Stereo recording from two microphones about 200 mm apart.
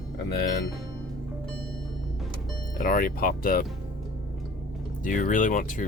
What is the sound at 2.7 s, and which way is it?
Speech, 45° left (ahead or behind).